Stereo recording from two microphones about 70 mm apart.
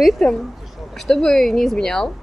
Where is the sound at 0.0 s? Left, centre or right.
Centre.